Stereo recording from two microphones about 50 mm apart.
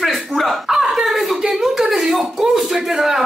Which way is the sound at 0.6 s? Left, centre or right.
Centre.